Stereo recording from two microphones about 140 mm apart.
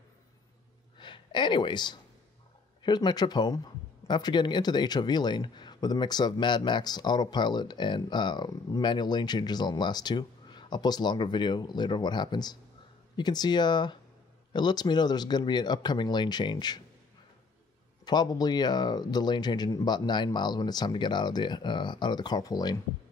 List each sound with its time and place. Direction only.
0.9 s a sound: 35° left (ahead or behind)
2.8 s speech: 30° left (ahead or behind)
18.0 s speech: 30° left (ahead or behind)